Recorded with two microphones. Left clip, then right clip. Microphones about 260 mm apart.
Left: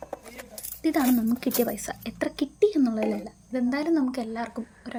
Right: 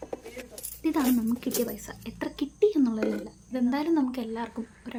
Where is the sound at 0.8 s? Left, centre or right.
Centre.